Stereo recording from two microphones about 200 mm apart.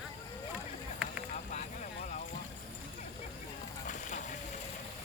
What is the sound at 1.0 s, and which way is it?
Vehicle, 5° right (ahead or behind).